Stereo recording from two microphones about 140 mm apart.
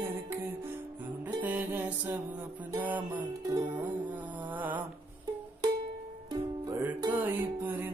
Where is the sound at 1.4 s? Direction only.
15° right (ahead or behind).